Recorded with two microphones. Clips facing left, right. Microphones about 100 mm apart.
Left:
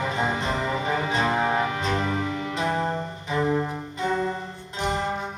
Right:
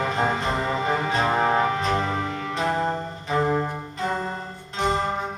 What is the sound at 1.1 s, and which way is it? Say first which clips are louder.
Music: right 2 dB; 35° right (ahead or behind).